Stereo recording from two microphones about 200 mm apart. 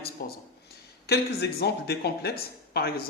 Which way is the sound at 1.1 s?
55° left (ahead or behind).